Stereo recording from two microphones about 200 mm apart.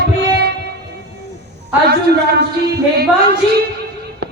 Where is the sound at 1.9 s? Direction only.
55° right (ahead or behind).